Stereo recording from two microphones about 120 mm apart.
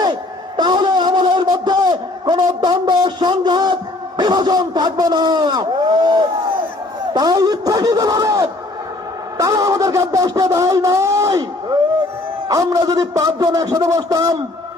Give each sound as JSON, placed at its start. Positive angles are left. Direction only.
{"t": 0.0, "sound": "a sound", "side_deg": -35}
{"t": 4.2, "sound": "a man's voice", "side_deg": -35}
{"t": 12.5, "sound": "a man's voice", "side_deg": -30}